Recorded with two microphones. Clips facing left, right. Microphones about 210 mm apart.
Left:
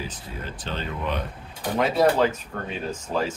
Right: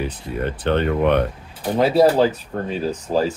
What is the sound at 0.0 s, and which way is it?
Speech, 60° right (ahead or behind).